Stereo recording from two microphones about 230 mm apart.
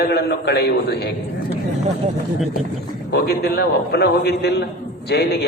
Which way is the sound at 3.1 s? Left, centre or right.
Left.